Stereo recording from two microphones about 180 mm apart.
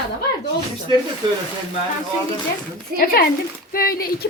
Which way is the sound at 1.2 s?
25° right (ahead or behind).